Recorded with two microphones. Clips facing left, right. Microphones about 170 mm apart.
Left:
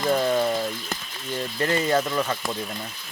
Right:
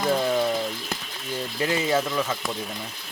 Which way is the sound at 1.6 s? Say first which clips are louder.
Left 1 dB; 5° right (ahead or behind).